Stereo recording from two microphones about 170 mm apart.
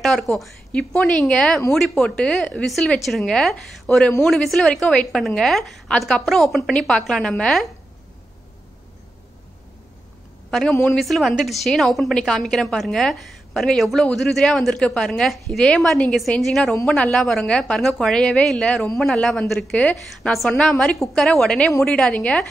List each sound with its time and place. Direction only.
0.0 s a woman's voice: centre (ahead or behind)
10.5 s a woman's voice: centre (ahead or behind)